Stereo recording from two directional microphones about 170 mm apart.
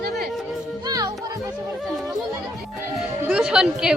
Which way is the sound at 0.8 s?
20° right (ahead or behind).